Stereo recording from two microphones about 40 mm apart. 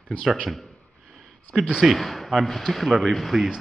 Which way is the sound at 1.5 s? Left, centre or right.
Right.